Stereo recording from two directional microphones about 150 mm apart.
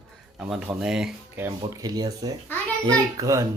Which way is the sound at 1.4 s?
25° right (ahead or behind).